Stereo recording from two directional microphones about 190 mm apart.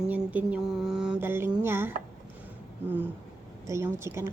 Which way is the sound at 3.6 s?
15° right (ahead or behind).